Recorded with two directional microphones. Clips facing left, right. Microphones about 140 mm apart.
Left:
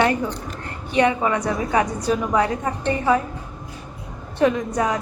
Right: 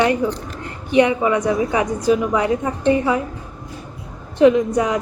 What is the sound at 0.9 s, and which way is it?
A woman's voice, 15° right (ahead or behind).